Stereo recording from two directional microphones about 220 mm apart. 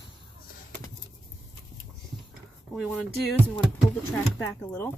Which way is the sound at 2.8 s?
5° right (ahead or behind).